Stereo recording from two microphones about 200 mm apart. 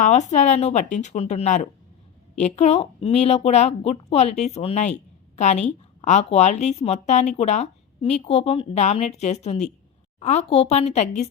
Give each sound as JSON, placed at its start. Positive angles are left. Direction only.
{"t": 0.0, "sound": "a woman's voice", "side_deg": 35}